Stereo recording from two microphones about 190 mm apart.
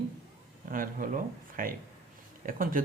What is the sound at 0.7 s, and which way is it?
Speech, 45° right (ahead or behind).